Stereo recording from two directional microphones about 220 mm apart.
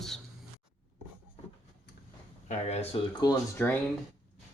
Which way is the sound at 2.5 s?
30° left (ahead or behind).